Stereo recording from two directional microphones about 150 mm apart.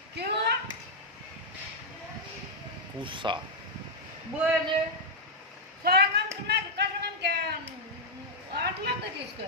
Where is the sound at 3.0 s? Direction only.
35° right (ahead or behind).